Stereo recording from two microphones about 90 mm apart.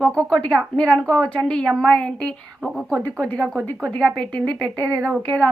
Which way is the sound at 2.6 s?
5° right (ahead or behind).